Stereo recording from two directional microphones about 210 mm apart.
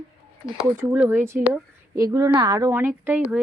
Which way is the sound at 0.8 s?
10° right (ahead or behind).